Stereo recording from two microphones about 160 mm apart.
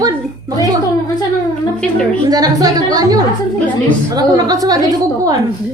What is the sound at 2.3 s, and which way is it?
A woman's voice, 25° right (ahead or behind).